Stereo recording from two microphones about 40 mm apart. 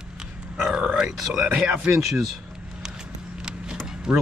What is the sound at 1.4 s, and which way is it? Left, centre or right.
Speech, right.